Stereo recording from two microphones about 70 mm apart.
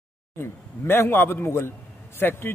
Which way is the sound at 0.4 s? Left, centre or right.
Left.